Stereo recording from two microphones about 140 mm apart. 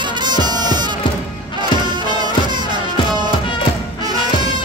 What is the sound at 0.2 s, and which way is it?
Music, 30° right (ahead or behind).